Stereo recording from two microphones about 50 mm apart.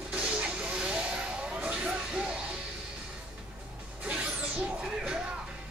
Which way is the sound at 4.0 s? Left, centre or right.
Right.